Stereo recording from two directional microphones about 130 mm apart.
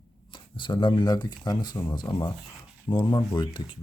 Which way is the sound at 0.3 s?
40° left (ahead or behind).